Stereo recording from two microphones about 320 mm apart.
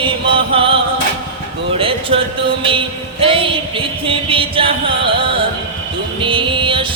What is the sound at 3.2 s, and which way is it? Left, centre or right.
Music, centre.